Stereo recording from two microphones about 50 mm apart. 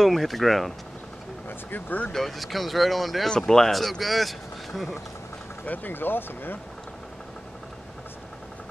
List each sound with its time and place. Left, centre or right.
0.0 s speech: centre
1.7 s speech: left
2.1 s speech: centre
5.7 s speech: left